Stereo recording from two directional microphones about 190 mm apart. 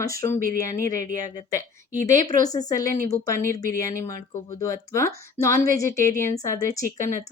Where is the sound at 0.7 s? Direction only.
15° left (ahead or behind).